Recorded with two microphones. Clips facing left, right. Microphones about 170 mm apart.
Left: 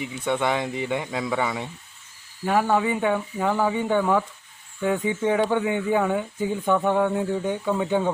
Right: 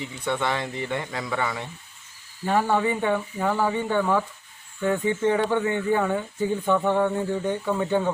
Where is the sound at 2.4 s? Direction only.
5° left (ahead or behind).